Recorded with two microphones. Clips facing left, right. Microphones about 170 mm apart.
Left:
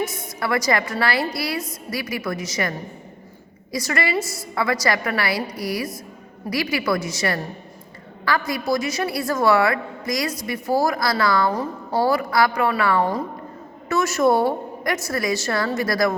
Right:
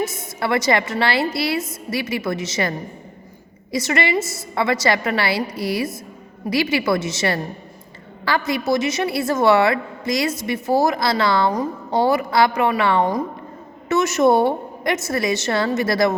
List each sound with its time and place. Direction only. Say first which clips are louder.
0.0 s a woman's voice: right 2 dB; 25° right (ahead or behind)